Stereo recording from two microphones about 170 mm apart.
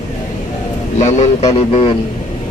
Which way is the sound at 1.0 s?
45° left (ahead or behind).